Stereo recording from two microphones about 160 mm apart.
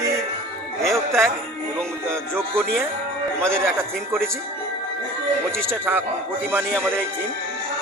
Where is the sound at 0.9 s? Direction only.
15° right (ahead or behind).